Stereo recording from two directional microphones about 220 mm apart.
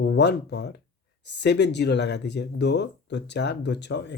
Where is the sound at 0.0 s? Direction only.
50° left (ahead or behind).